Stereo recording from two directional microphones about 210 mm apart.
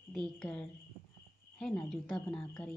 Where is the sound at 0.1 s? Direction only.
5° left (ahead or behind).